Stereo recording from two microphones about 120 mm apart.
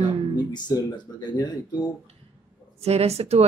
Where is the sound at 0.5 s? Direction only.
35° left (ahead or behind).